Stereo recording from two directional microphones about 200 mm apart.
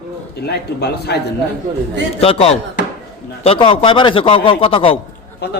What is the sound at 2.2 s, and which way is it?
A man's voice, 30° left (ahead or behind).